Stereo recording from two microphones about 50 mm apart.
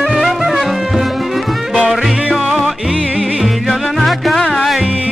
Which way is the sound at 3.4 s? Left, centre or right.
Centre.